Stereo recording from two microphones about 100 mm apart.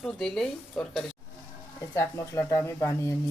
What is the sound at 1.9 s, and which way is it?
Speech, 30° left (ahead or behind).